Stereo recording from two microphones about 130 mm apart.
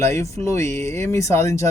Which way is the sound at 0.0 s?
20° left (ahead or behind).